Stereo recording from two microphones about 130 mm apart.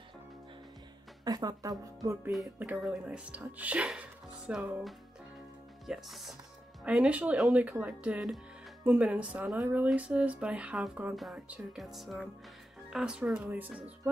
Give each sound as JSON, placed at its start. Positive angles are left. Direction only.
{"t": 1.2, "sound": "a woman's voice", "side_deg": -30}
{"t": 2.6, "sound": "speech", "side_deg": -10}
{"t": 5.9, "sound": "music", "side_deg": 0}
{"t": 6.8, "sound": "speech", "side_deg": -10}
{"t": 11.1, "sound": "music", "side_deg": -5}
{"t": 12.9, "sound": "speech", "side_deg": -5}